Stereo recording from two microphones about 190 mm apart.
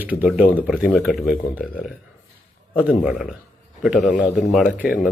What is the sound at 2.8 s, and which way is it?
Speech, 5° right (ahead or behind).